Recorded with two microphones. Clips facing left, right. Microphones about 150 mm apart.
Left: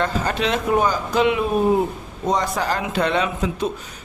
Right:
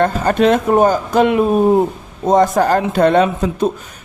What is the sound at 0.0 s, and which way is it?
Speech, 50° right (ahead or behind).